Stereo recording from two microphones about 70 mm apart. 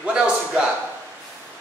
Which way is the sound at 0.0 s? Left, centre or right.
Centre.